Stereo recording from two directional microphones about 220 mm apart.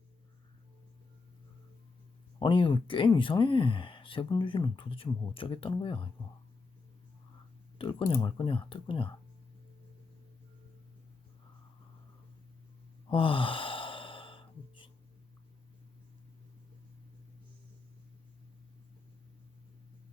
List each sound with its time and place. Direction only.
2.4 s speech: 20° left (ahead or behind)
7.8 s speech: 25° left (ahead or behind)
13.1 s sigh: 25° left (ahead or behind)